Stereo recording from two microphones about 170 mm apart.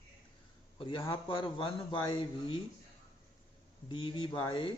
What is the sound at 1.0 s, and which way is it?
Speech, 30° left (ahead or behind).